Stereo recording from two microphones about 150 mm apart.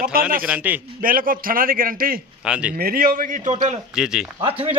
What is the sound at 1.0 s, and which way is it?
A man's voice, 70° right (ahead or behind).